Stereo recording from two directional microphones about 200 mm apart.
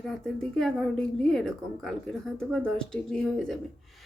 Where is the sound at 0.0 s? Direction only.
Centre (ahead or behind).